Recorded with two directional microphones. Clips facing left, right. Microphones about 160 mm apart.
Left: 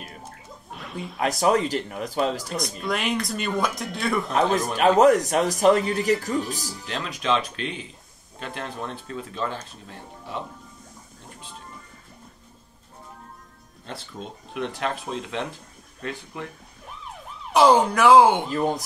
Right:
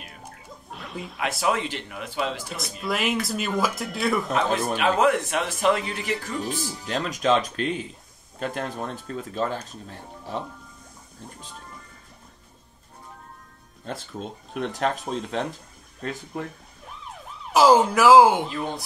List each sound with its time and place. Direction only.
0.7 s a sound: centre (ahead or behind)
1.4 s a man's voice: 40° left (ahead or behind)
2.8 s speech: centre (ahead or behind)
4.3 s a man's voice: 40° left (ahead or behind)
6.9 s speech: 45° right (ahead or behind)
14.5 s speech: 40° right (ahead or behind)
17.5 s speech: centre (ahead or behind)
18.5 s a man's voice: 40° left (ahead or behind)